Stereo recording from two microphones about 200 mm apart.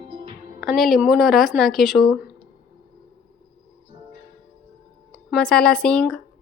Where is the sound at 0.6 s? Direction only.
Centre (ahead or behind).